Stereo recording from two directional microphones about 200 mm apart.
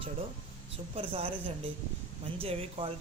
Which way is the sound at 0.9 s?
30° right (ahead or behind).